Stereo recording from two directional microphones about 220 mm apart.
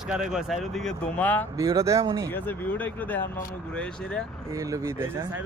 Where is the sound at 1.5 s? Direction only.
15° right (ahead or behind).